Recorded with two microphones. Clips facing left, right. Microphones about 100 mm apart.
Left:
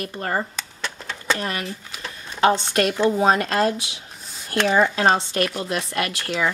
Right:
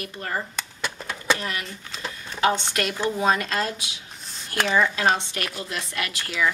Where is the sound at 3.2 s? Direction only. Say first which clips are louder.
Left 2 dB; 40° left (ahead or behind).